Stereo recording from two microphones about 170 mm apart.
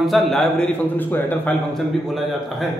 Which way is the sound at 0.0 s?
Centre (ahead or behind).